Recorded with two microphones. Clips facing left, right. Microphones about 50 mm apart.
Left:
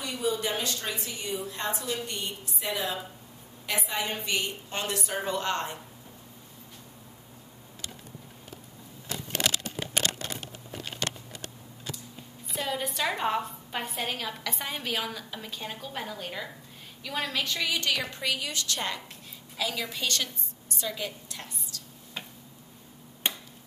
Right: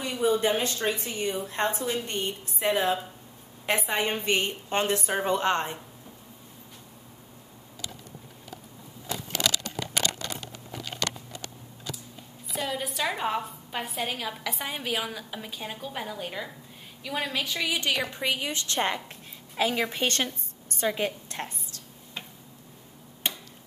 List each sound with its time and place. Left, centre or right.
0.0 s a woman's voice: right
12.5 s a woman's voice: centre; by 21.8 s right
23.2 s finger snapping: centre